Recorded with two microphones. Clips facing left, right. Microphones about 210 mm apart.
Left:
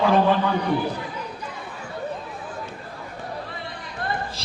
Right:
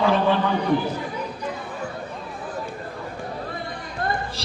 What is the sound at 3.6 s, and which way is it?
Music, 45° right (ahead or behind).